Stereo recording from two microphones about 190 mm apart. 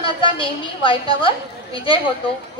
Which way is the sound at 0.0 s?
25° left (ahead or behind).